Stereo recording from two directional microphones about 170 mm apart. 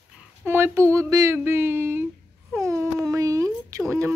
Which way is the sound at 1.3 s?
15° right (ahead or behind).